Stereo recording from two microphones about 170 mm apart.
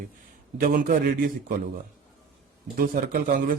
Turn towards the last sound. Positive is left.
turn(degrees=-55)  # may be behind; listen again after turning